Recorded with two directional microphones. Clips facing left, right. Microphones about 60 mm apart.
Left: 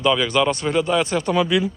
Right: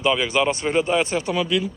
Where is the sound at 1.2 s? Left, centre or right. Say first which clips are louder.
Left 3 dB; centre.